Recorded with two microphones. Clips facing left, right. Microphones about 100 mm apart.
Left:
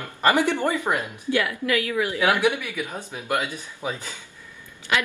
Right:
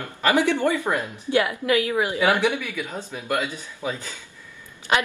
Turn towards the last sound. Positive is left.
turn(degrees=-30)  # may be behind; listen again after turning